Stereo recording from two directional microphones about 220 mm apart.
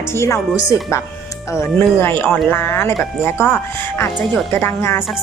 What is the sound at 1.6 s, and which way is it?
Speech, 10° left (ahead or behind).